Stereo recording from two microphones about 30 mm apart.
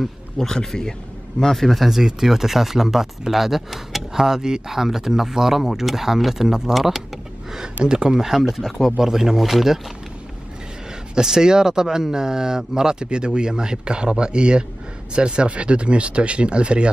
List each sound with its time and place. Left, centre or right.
0.0 s a man's voice: centre
2.0 s speech: centre
4.1 s a man's voice: centre
7.8 s speech: right
8.3 s speech: centre
11.1 s speech: centre; by 16.9 s right